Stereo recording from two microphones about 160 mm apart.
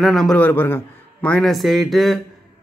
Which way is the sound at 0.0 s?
Centre (ahead or behind).